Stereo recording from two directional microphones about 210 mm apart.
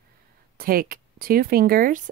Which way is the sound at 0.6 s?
45° right (ahead or behind).